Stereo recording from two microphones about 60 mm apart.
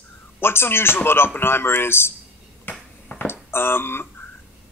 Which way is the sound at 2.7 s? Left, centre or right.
Left.